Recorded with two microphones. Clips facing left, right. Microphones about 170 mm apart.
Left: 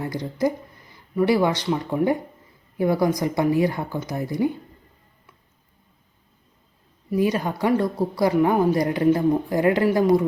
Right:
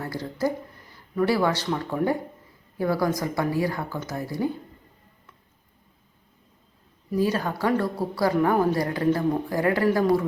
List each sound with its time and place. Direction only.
0.0 s speech: 15° left (ahead or behind)
7.2 s a woman's voice: 15° left (ahead or behind)